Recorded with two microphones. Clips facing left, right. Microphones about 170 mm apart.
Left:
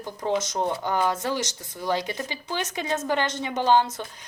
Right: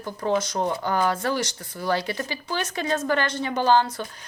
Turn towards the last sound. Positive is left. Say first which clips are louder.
# right 1 dB
turn(degrees=20)  # may be behind; listen again after turning